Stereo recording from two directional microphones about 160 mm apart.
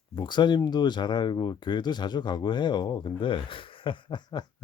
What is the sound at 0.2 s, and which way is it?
Speech, 30° left (ahead or behind).